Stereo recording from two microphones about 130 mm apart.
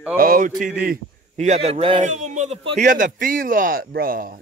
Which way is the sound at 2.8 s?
90° right.